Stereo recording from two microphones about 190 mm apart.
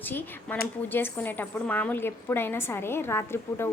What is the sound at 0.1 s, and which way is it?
A woman's voice, 10° left (ahead or behind).